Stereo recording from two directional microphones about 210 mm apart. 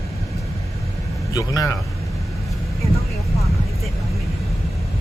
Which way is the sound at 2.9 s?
15° left (ahead or behind).